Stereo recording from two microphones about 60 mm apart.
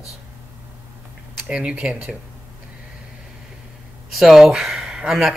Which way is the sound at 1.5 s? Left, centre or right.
Centre.